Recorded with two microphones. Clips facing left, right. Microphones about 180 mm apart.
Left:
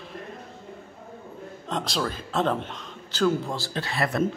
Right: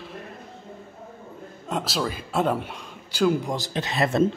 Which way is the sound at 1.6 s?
5° right (ahead or behind).